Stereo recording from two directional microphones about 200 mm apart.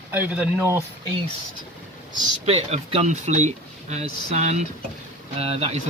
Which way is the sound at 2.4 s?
30° right (ahead or behind).